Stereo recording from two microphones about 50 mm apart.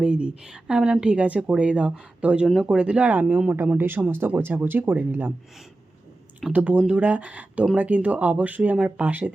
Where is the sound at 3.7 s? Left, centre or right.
Right.